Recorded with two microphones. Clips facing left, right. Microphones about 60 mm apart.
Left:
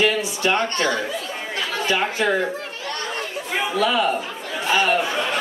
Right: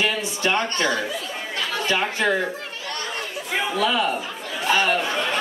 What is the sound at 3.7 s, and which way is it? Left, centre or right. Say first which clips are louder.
Speech: left 3 dB; centre.